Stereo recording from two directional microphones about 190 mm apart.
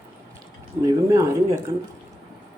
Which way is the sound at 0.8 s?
15° right (ahead or behind).